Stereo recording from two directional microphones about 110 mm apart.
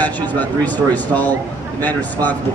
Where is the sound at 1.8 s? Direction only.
15° left (ahead or behind).